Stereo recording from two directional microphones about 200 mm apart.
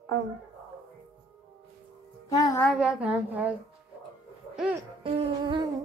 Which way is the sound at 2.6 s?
Centre (ahead or behind).